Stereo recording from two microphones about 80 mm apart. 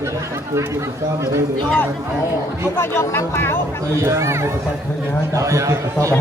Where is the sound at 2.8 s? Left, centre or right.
Left.